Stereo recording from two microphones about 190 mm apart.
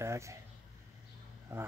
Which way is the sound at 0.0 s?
15° right (ahead or behind).